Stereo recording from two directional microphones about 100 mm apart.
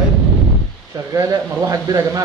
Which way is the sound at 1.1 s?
35° right (ahead or behind).